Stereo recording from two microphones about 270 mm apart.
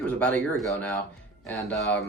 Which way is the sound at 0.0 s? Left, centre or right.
Centre.